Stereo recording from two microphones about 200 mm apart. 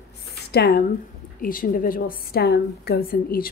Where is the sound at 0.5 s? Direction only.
50° left (ahead or behind).